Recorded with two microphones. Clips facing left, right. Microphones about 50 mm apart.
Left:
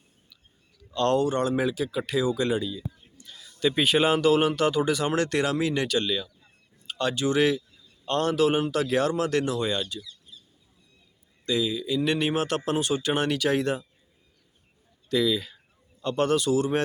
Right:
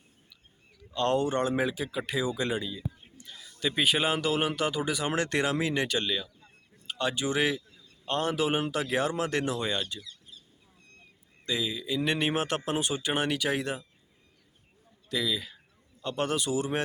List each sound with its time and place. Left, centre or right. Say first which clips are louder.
0.9 s speech: left 3 dB; centre
1.2 s a man's voice: left 3 dB; right
3.7 s speech: left 4 dB; centre; by 9.8 s right
11.4 s speech: left 5 dB; centre
15.1 s speech: left 6 dB; centre